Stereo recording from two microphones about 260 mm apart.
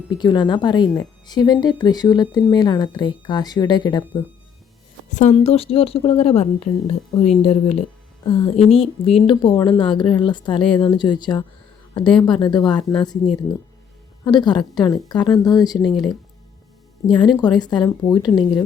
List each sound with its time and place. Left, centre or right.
0.2 s a woman's voice: centre
5.0 s a woman's voice: left
12.8 s speech: centre
14.3 s a woman's voice: centre
15.8 s speech: centre
17.1 s a woman's voice: centre